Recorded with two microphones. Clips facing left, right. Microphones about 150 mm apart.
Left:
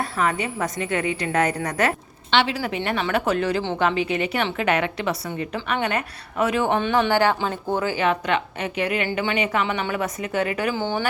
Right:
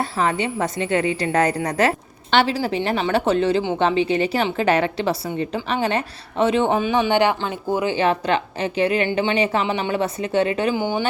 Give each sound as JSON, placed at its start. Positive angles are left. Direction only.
{"t": 0.0, "sound": "a woman's voice", "side_deg": -30}
{"t": 6.7, "sound": "speech", "side_deg": -5}
{"t": 7.1, "sound": "a woman's voice", "side_deg": -20}
{"t": 7.9, "sound": "a woman's voice", "side_deg": -30}
{"t": 10.8, "sound": "speech", "side_deg": -15}